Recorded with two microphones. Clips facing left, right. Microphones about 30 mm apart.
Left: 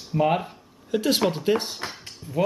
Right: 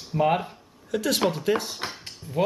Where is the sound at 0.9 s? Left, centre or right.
Centre.